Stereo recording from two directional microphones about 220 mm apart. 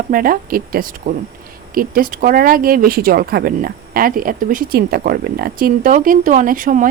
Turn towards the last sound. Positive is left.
turn(degrees=-35)  # may be behind; listen again after turning